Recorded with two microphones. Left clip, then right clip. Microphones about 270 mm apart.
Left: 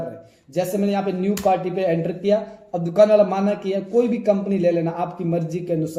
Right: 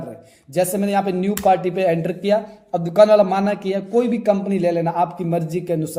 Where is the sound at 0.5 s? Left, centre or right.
Right.